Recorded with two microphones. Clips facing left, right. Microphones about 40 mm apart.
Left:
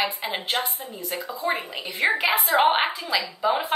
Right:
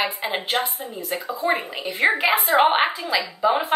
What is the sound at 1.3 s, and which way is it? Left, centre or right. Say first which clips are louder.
A woman's voice: right 4 dB; centre.